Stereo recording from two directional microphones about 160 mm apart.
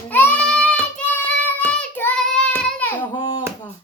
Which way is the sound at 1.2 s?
10° left (ahead or behind).